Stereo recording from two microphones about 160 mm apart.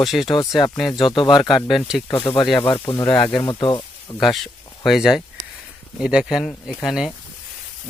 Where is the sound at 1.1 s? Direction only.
30° left (ahead or behind).